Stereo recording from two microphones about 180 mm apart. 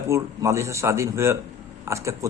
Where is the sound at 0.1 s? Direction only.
15° right (ahead or behind).